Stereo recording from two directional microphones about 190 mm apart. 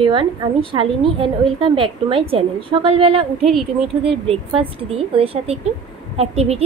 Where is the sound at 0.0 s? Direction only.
25° right (ahead or behind).